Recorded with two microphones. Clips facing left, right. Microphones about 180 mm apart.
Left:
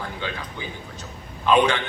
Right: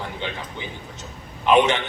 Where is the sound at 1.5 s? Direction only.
20° right (ahead or behind).